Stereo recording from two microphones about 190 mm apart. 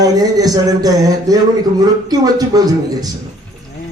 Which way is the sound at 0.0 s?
20° right (ahead or behind).